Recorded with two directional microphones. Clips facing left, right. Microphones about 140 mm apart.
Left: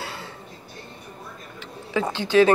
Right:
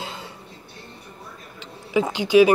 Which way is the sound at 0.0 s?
20° right (ahead or behind).